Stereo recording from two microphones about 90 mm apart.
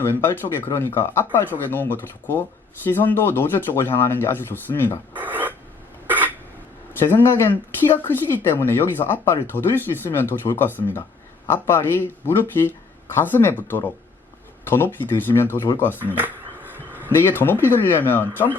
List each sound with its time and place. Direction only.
0.6 s speech: 25° left (ahead or behind)
5.1 s a sound: 20° right (ahead or behind)
7.1 s speech: 25° left (ahead or behind)
14.9 s speech: 25° left (ahead or behind)
16.0 s a sound: 20° right (ahead or behind)
17.2 s speech: 25° left (ahead or behind)